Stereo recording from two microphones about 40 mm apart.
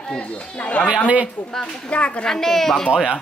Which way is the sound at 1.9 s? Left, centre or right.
Left.